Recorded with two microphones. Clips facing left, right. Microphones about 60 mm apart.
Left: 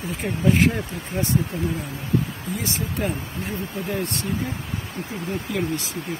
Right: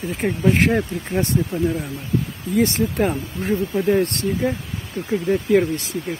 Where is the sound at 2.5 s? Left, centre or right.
Right.